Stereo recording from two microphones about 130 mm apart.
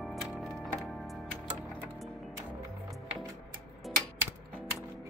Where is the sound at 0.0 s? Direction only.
Centre (ahead or behind).